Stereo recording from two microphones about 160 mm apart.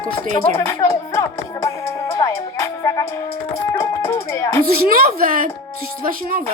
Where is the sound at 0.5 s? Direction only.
15° left (ahead or behind).